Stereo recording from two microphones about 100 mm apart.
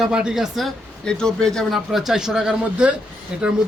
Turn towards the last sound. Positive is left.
turn(degrees=-10)  # may be behind; listen again after turning